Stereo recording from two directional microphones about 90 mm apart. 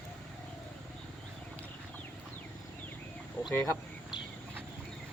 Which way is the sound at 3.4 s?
35° left (ahead or behind).